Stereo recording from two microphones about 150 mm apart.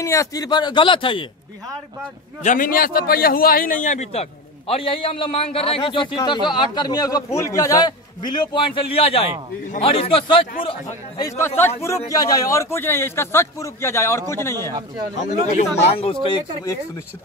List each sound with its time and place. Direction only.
0.0 s speech: 20° left (ahead or behind)
2.4 s a man's voice: 65° left (ahead or behind); by 11.2 s 35° left (ahead or behind)
11.2 s a man's voice: 15° left (ahead or behind)
14.7 s speech: 25° right (ahead or behind)
15.3 s speech: 60° left (ahead or behind)
15.8 s a man's voice: 40° left (ahead or behind)